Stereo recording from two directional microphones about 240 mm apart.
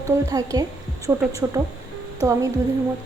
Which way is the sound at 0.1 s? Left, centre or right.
Centre.